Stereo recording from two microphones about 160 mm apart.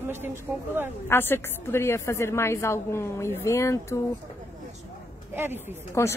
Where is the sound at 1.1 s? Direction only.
15° left (ahead or behind).